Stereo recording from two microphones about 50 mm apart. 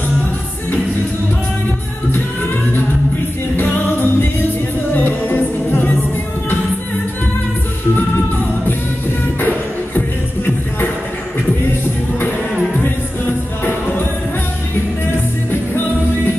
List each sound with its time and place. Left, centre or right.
3.5 s music: left
9.9 s music: left